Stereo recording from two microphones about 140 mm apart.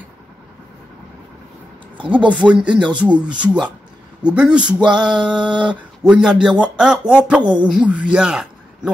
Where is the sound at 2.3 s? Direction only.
10° right (ahead or behind).